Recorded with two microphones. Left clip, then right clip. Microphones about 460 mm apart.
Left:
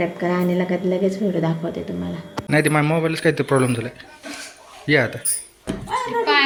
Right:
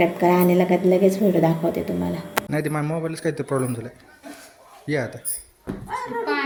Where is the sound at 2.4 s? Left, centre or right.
Right.